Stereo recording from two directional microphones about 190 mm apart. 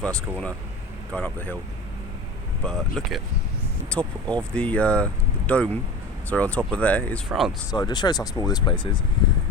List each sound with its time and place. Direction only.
0.0 s speech: 5° left (ahead or behind)
2.6 s speech: centre (ahead or behind)
7.7 s speech: 20° left (ahead or behind)